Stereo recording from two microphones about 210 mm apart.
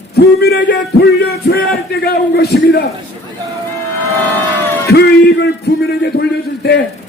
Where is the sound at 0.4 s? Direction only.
55° left (ahead or behind).